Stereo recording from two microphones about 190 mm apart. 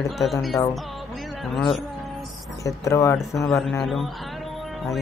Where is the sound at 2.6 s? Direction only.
15° left (ahead or behind).